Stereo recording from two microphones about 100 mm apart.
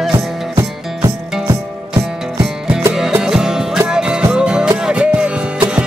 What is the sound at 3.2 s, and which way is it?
Music, 5° right (ahead or behind).